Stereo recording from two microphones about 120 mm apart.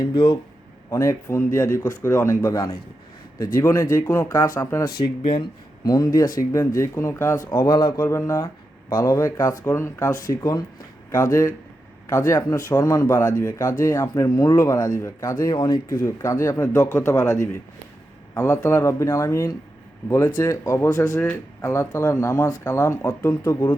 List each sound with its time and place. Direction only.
0.0 s speech: 45° left (ahead or behind)
0.9 s speech: 25° left (ahead or behind)
5.2 s speech: 50° left (ahead or behind)
5.8 s speech: 30° left (ahead or behind)
7.7 s speech: 40° left (ahead or behind)
7.9 s speech: 20° left (ahead or behind)
11.1 s speech: 25° left (ahead or behind)
16.0 s speech: 25° left (ahead or behind)